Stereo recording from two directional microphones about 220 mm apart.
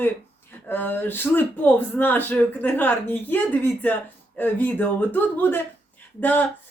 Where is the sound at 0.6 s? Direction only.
10° left (ahead or behind).